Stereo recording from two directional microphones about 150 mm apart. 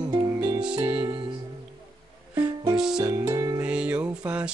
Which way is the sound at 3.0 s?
20° right (ahead or behind).